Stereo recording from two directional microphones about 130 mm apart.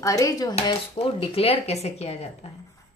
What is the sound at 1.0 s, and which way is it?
Speech, 45° left (ahead or behind).